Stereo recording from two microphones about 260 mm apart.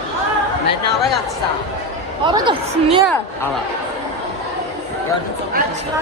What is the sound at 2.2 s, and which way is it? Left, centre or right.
Speech, centre.